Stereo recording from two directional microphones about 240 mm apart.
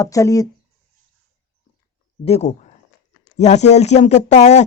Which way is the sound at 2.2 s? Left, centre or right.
Left.